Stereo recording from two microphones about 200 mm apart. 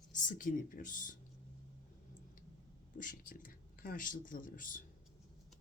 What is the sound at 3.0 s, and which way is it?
Speech, 45° left (ahead or behind).